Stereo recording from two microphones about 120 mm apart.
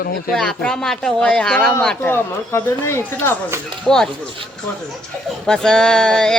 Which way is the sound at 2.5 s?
20° left (ahead or behind).